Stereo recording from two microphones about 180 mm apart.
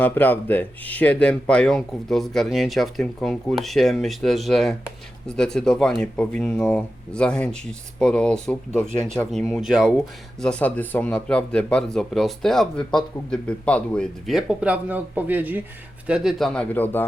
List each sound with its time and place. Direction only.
0.0 s speech: 10° left (ahead or behind)
10.4 s speech: 5° left (ahead or behind)